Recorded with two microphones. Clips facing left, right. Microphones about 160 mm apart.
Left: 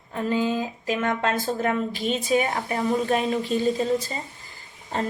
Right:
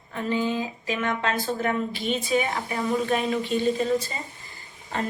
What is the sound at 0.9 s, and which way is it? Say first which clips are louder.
A woman's voice: left 3 dB; 45° left (ahead or behind).